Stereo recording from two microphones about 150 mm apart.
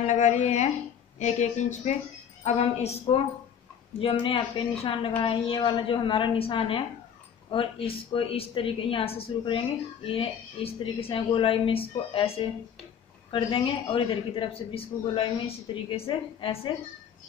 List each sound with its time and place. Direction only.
0.0 s a woman's voice: 55° left (ahead or behind); by 16.7 s 35° left (ahead or behind)